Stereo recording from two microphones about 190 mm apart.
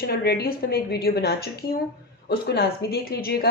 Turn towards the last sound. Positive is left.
turn(degrees=55)  # may be behind; listen again after turning